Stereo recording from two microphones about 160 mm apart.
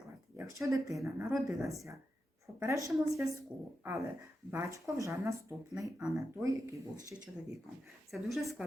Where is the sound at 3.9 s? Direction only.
15° right (ahead or behind).